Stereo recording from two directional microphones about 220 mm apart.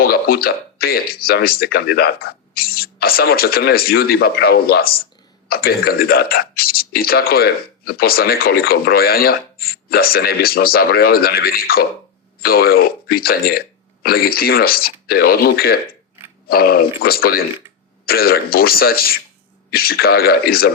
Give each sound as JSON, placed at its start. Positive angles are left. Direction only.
{"t": 0.0, "sound": "speech", "side_deg": 45}